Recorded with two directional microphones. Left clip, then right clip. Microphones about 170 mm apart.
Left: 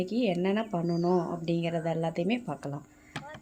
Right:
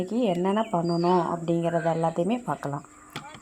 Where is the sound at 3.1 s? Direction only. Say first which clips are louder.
Right 1 dB; 20° left (ahead or behind).